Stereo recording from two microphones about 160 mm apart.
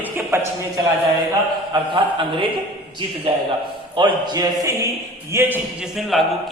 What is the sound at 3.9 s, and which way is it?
A man's voice, 25° right (ahead or behind).